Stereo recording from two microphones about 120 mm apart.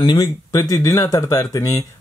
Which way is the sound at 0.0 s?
35° left (ahead or behind).